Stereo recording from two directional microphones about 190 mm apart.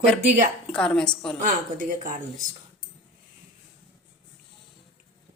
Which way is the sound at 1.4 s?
45° right (ahead or behind).